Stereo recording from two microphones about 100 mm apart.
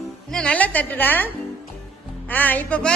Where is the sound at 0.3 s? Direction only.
10° left (ahead or behind).